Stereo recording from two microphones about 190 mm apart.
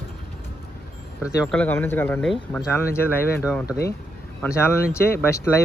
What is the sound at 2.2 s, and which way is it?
Speech, centre (ahead or behind).